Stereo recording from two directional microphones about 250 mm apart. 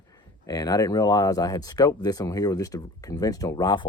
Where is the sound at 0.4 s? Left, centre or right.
Centre.